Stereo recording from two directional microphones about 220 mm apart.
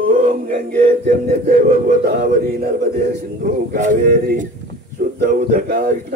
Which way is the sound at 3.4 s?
35° right (ahead or behind).